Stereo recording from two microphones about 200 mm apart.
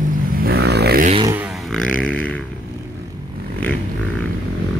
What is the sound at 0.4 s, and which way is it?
Vehicle, 55° right (ahead or behind).